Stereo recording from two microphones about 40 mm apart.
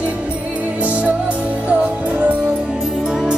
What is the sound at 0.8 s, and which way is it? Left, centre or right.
Music, right.